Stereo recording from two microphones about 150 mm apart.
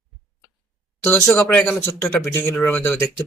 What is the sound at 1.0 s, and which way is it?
Speech, 15° left (ahead or behind).